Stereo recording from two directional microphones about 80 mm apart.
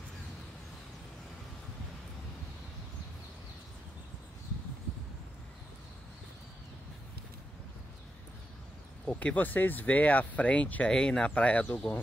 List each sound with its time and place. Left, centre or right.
9.0 s speech: centre